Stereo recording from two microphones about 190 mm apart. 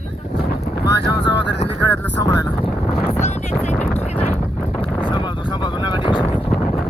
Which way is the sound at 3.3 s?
35° left (ahead or behind).